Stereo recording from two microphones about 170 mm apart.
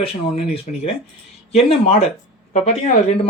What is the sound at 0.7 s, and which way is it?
A man's voice, 45° left (ahead or behind).